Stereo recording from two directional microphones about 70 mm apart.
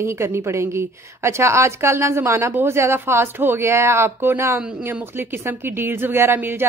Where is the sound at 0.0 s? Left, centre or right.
Right.